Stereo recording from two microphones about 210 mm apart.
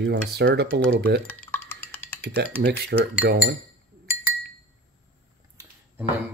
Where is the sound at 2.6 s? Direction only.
50° right (ahead or behind).